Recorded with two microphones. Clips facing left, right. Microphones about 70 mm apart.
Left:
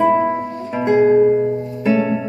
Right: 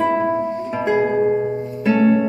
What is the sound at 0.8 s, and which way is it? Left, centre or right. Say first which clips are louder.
Music: left 6 dB; centre.